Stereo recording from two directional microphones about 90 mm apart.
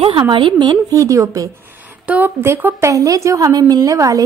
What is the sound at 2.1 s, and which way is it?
Speech, 20° right (ahead or behind).